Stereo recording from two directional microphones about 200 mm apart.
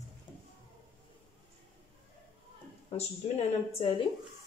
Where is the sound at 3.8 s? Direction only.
30° left (ahead or behind).